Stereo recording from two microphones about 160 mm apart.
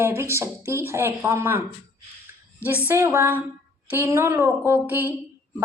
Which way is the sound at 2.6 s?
15° left (ahead or behind).